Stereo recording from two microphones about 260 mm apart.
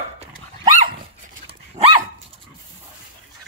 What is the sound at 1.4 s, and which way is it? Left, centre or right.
Dog, right.